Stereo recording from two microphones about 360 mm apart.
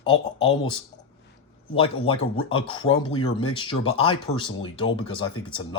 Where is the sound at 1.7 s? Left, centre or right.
Centre.